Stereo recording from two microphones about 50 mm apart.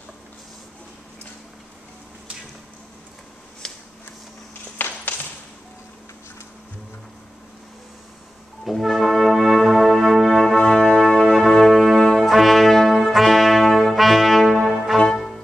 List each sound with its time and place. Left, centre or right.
3.6 s shuffling cards: centre
4.7 s a sound: left
8.6 s brass instrument: centre
15.0 s music: centre